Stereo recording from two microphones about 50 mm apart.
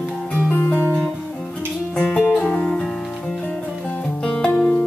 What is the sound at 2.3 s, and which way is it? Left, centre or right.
Guitar, centre.